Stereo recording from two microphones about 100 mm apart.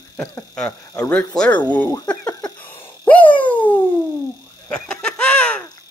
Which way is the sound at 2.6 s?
20° left (ahead or behind).